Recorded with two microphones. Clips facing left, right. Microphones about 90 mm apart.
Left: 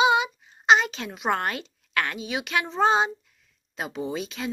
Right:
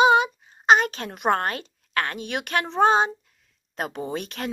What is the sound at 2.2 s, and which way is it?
Speech, 55° right (ahead or behind).